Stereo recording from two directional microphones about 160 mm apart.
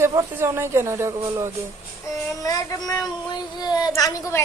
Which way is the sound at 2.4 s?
20° left (ahead or behind).